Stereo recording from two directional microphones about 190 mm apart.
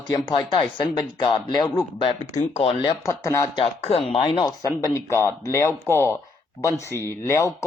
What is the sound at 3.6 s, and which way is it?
Speech, 30° left (ahead or behind).